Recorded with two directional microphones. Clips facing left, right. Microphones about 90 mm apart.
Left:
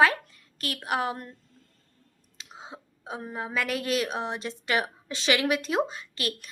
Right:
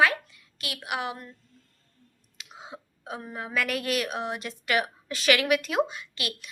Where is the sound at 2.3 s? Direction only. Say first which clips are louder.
Even; 30° left (ahead or behind).